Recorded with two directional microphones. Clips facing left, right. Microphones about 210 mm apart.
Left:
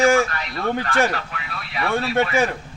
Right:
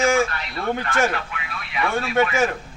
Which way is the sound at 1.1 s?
40° left (ahead or behind).